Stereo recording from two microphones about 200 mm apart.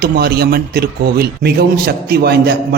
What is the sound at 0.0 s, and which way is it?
A man's voice, 50° right (ahead or behind).